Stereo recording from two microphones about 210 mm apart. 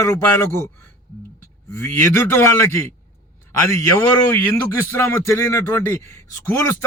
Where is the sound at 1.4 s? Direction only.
10° left (ahead or behind).